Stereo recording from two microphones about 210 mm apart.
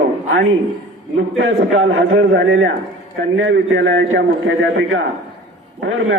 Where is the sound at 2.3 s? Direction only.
60° right (ahead or behind).